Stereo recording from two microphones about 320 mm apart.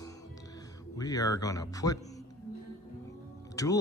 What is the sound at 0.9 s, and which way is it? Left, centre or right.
Speech, centre.